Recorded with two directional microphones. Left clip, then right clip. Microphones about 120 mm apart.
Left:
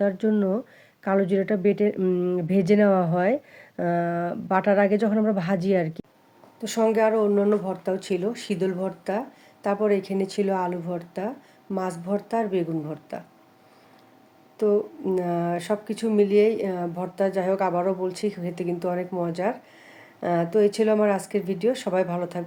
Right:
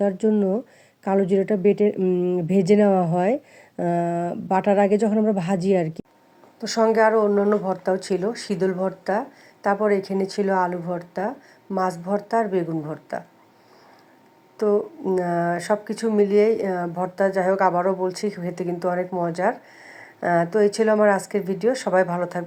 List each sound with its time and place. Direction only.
0.0 s speech: 25° right (ahead or behind)
6.6 s speech: 5° right (ahead or behind)
14.6 s speech: 5° right (ahead or behind)